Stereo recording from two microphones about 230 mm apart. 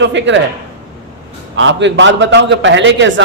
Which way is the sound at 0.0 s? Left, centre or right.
Right.